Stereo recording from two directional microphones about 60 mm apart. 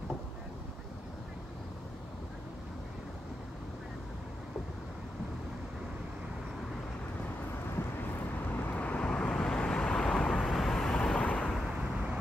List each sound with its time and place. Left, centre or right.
8.6 s vehicle: left
9.3 s vehicle: centre
10.4 s vehicle: centre
11.1 s vehicle: left